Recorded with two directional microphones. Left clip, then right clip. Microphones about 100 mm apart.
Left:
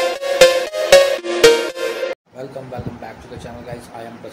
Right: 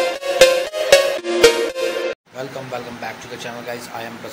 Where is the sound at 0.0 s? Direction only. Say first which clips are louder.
Left 1 dB; centre (ahead or behind).